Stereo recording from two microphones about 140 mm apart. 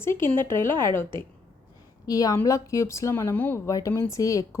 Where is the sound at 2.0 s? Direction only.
25° left (ahead or behind).